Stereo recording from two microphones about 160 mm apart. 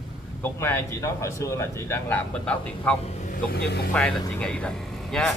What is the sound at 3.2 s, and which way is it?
Music, 70° left (ahead or behind).